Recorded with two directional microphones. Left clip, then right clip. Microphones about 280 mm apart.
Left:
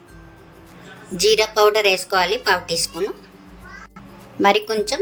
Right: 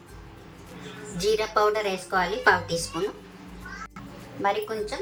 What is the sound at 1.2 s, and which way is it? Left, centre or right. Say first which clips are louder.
A woman's voice: left 8 dB; left.